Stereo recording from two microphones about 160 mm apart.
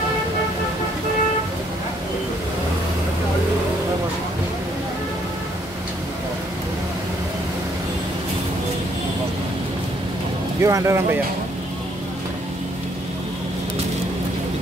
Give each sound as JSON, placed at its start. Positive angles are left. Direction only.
{"t": 10.6, "sound": "speech", "side_deg": -20}